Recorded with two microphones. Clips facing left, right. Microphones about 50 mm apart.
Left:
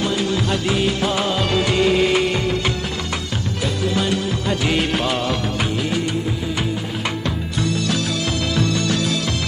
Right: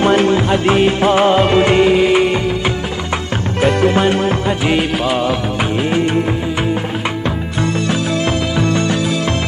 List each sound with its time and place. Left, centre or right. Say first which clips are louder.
0.0 s music: right 8 dB; right
1.9 s music: right 5 dB; centre
3.6 s music: right 9 dB; right
4.5 s music of bollywood: right 4 dB; right
4.9 s music of bollywood: right 5 dB; centre
8.5 s music: right 2 dB; right